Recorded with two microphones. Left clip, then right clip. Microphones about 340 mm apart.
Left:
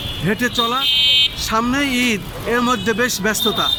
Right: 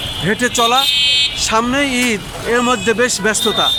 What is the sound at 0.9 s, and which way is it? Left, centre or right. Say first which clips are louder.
Speech: right 1 dB; centre.